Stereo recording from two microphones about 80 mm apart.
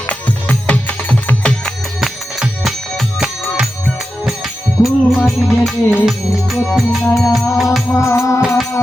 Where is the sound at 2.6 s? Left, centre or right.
Centre.